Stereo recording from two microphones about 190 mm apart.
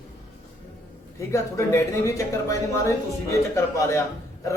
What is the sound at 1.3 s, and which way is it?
Speech, 15° left (ahead or behind).